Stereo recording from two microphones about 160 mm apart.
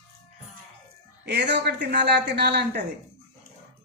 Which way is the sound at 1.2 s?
90° right.